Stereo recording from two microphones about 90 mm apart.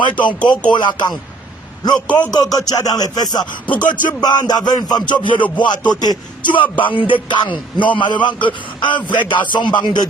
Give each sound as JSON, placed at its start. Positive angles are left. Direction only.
{"t": 0.0, "sound": "speech", "side_deg": 60}
{"t": 2.0, "sound": "a man's voice", "side_deg": 15}
{"t": 2.3, "sound": "music", "side_deg": 45}
{"t": 7.1, "sound": "speech", "side_deg": 60}